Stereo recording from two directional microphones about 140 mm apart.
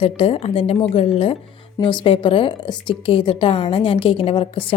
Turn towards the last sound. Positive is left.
turn(degrees=40)  # may be behind; listen again after turning